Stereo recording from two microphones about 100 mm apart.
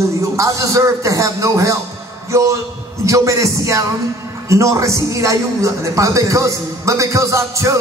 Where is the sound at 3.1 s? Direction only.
30° right (ahead or behind).